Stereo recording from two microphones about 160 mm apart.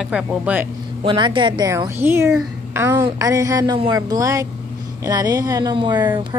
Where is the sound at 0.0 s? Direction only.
5° right (ahead or behind).